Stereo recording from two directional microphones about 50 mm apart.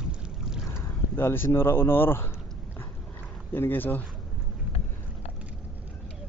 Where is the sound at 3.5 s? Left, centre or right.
Left.